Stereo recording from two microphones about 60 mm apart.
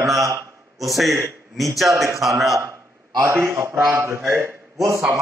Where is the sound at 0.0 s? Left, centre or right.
Centre.